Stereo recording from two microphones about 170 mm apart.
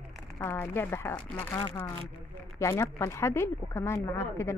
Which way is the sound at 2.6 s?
15° left (ahead or behind).